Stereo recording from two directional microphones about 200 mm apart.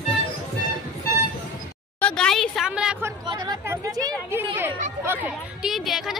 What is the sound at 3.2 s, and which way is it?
Speech, 15° right (ahead or behind).